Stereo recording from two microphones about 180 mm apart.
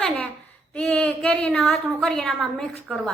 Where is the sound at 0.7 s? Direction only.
5° left (ahead or behind).